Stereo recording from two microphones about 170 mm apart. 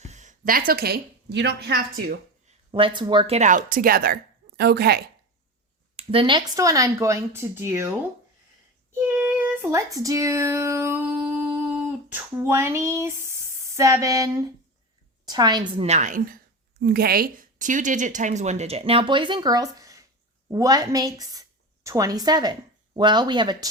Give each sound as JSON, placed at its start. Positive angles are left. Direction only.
{"t": 0.0, "sound": "a woman's voice", "side_deg": -45}
{"t": 2.7, "sound": "speech", "side_deg": -30}
{"t": 6.0, "sound": "speech", "side_deg": -35}
{"t": 9.0, "sound": "speech", "side_deg": -10}
{"t": 15.9, "sound": "a woman's voice", "side_deg": -45}